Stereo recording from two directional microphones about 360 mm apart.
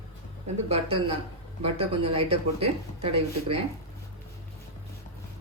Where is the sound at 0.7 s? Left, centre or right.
Centre.